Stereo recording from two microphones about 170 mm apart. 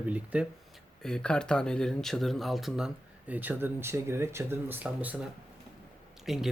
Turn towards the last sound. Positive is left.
turn(degrees=0)  # may be behind; listen again after turning